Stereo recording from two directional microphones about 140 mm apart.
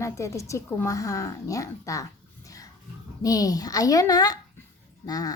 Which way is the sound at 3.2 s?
25° left (ahead or behind).